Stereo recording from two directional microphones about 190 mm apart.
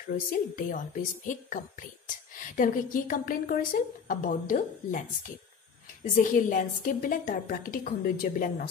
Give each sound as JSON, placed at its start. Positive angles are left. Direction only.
{"t": 0.3, "sound": "speech", "side_deg": 45}